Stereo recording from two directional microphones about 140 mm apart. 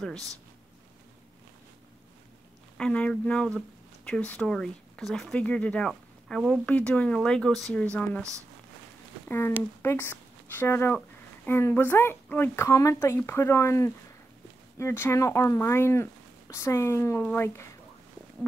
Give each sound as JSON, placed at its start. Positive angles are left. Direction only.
{"t": 2.8, "sound": "speech", "side_deg": 10}
{"t": 9.3, "sound": "speech", "side_deg": 15}